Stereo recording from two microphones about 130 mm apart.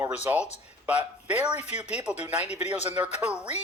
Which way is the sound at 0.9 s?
10° right (ahead or behind).